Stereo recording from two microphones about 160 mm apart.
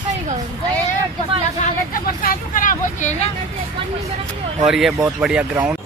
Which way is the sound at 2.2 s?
60° left (ahead or behind).